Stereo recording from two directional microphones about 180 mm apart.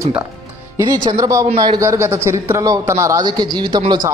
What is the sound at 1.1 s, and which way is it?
A man's voice, 20° right (ahead or behind).